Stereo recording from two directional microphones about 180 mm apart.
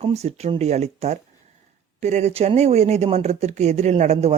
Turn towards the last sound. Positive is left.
turn(degrees=-35)  # may be behind; listen again after turning